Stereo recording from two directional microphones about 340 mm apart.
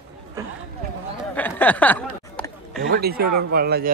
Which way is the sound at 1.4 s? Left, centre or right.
Centre.